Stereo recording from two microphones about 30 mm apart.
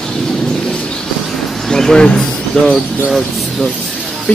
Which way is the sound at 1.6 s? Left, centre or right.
Centre.